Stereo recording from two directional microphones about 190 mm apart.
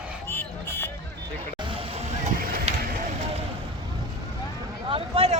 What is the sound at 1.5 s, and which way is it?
Vehicle, 25° right (ahead or behind).